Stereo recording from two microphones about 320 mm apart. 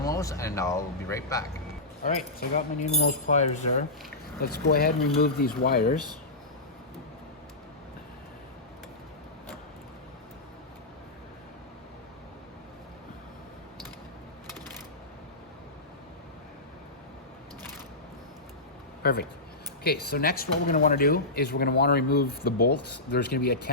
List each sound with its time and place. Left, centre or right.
0.0 s speech: centre
2.4 s speech: left
19.0 s speech: left